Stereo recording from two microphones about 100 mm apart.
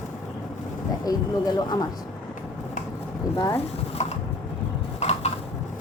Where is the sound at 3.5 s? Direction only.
90° left.